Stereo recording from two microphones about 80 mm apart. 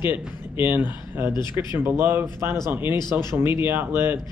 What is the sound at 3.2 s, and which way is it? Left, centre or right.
Speech, right.